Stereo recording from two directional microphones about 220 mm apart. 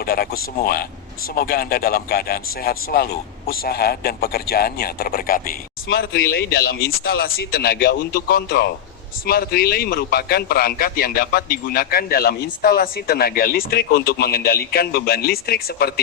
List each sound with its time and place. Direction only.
0.0 s a man's voice: 45° left (ahead or behind)